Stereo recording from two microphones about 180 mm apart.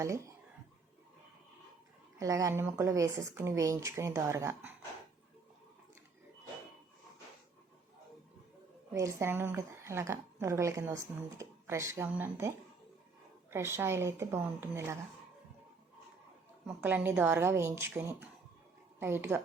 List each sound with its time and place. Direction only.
2.1 s a woman's voice: 20° right (ahead or behind)
8.9 s a woman's voice: 15° right (ahead or behind)
16.6 s a woman's voice: 10° right (ahead or behind)